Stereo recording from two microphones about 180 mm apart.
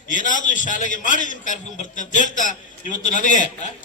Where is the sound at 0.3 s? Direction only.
45° left (ahead or behind).